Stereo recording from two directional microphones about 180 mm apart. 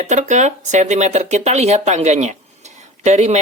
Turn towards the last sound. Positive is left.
turn(degrees=-40)  # may be behind; listen again after turning